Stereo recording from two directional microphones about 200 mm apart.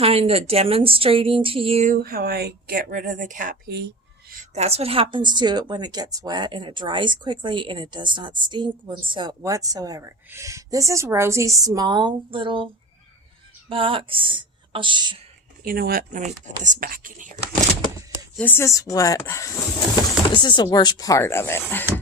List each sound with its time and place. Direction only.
0.0 s a woman's voice: 30° right (ahead or behind)
2.0 s a woman's voice: 50° right (ahead or behind)
3.8 s a sound: 55° right (ahead or behind)
4.4 s a woman's voice: 30° right (ahead or behind)
13.7 s speech: 25° right (ahead or behind)
15.6 s a woman's voice: 50° right (ahead or behind)
18.3 s speech: 10° left (ahead or behind)